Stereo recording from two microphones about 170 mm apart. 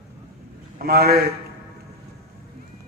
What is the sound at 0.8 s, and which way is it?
Speech, 65° right (ahead or behind).